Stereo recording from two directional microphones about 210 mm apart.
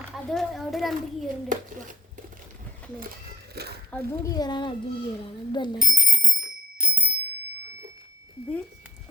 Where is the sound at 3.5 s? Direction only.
50° right (ahead or behind).